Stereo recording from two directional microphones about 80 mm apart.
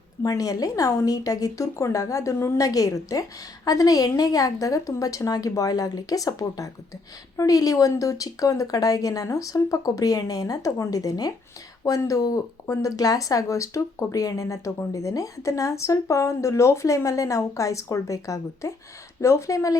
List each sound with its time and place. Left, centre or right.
0.2 s a woman's voice: left